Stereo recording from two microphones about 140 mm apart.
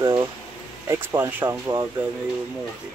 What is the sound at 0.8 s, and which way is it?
Speech, 15° right (ahead or behind).